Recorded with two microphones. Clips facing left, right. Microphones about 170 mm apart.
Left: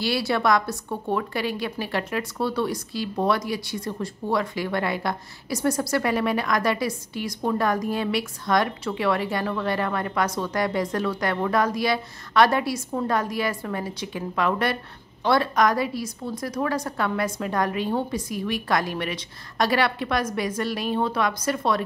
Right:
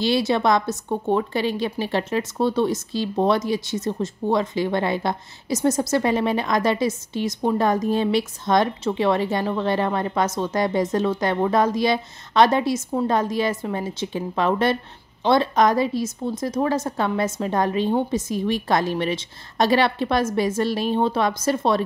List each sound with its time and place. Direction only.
0.0 s a woman's voice: 20° right (ahead or behind)